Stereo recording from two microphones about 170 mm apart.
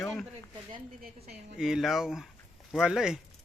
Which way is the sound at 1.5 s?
5° right (ahead or behind).